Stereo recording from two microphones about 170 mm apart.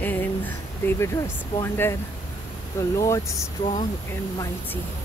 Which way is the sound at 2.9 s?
20° left (ahead or behind).